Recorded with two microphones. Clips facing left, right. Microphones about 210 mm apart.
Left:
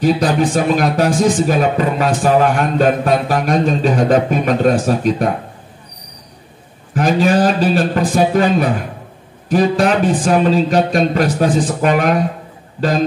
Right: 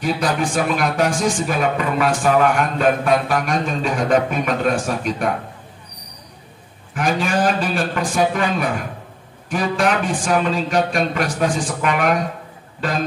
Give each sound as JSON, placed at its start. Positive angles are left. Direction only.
{"t": 0.0, "sound": "speech", "side_deg": 35}
{"t": 6.9, "sound": "speech", "side_deg": 35}